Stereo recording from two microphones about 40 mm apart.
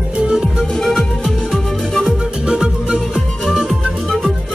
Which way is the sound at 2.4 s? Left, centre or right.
Right.